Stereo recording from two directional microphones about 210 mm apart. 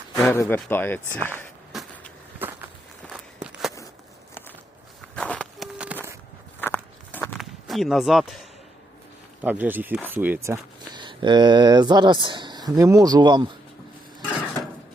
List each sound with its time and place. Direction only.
0.2 s speech: 10° left (ahead or behind)
1.7 s vehicle: centre (ahead or behind)
2.4 s a sound: 10° right (ahead or behind)
3.1 s walk: 5° right (ahead or behind)
5.1 s walk: 5° left (ahead or behind)
5.7 s a sound: 5° right (ahead or behind)
6.6 s walk: 10° left (ahead or behind)
7.3 s speech: centre (ahead or behind); by 13.5 s 20° right (ahead or behind)